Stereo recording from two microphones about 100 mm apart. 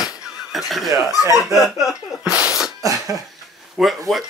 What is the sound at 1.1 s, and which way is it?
Speech, 35° left (ahead or behind).